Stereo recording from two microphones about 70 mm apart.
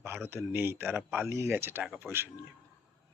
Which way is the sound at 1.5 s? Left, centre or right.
Right.